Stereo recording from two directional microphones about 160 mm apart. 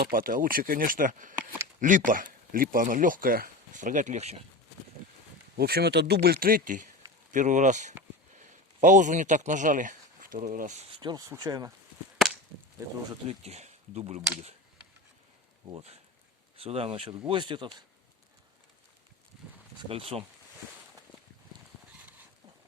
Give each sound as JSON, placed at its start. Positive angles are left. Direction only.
{"t": 0.0, "sound": "speech", "side_deg": -65}
{"t": 5.5, "sound": "speech", "side_deg": -75}
{"t": 6.2, "sound": "speech", "side_deg": -70}
{"t": 7.3, "sound": "a man's voice", "side_deg": -50}
{"t": 10.9, "sound": "speech", "side_deg": -25}
{"t": 13.2, "sound": "speech", "side_deg": -40}
{"t": 16.6, "sound": "speech", "side_deg": -35}
{"t": 19.7, "sound": "speech", "side_deg": -35}